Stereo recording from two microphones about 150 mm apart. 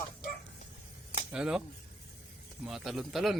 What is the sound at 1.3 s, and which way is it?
Speech, 5° right (ahead or behind).